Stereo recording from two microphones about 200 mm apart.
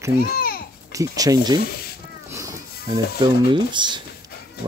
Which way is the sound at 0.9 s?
15° right (ahead or behind).